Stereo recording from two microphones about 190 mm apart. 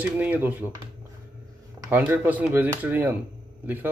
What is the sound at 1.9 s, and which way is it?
Speech, 10° right (ahead or behind).